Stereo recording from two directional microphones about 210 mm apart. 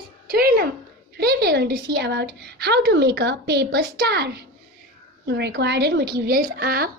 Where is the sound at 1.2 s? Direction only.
50° right (ahead or behind).